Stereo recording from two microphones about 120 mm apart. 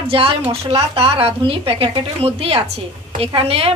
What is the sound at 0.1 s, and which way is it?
A woman's voice, 50° right (ahead or behind).